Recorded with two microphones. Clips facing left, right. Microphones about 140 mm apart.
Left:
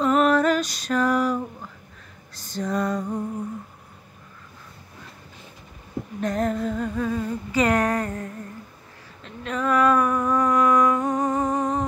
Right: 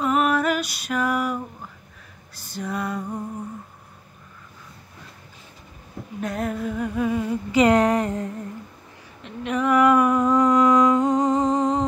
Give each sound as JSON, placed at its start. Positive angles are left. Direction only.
{"t": 0.0, "sound": "female singing", "side_deg": -10}
{"t": 2.3, "sound": "music", "side_deg": -10}
{"t": 6.2, "sound": "a sound", "side_deg": -5}